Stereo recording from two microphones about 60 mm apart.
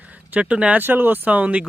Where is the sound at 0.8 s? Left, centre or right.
Right.